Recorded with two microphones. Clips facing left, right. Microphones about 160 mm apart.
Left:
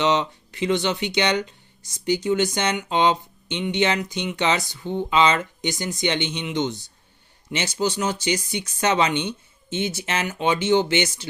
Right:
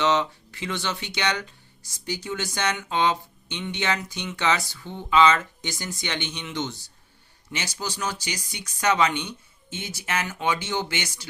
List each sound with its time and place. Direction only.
0.0 s speech: 20° left (ahead or behind)